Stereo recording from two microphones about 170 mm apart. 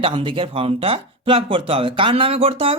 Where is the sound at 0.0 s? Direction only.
30° right (ahead or behind).